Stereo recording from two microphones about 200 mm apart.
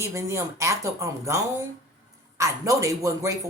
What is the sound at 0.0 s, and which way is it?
Speech, 15° right (ahead or behind).